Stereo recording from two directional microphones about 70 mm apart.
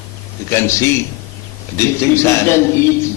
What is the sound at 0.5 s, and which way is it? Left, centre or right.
A man's voice, left.